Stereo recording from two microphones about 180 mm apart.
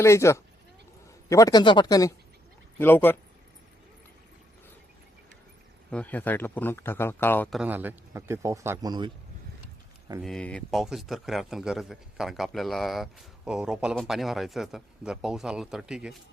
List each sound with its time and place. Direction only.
0.0 s speech: 15° left (ahead or behind)
5.9 s speech: 10° left (ahead or behind)
7.5 s a man's voice: 5° right (ahead or behind); by 9.1 s 25° right (ahead or behind)
10.2 s a man's voice: 5° left (ahead or behind)